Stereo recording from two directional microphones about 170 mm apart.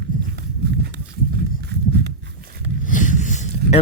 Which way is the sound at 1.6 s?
75° right (ahead or behind).